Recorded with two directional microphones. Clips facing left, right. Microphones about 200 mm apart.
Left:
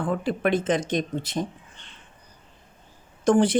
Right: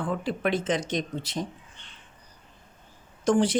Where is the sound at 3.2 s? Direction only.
55° left (ahead or behind).